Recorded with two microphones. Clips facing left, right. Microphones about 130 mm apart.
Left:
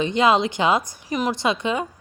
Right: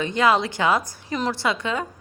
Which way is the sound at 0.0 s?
20° left (ahead or behind).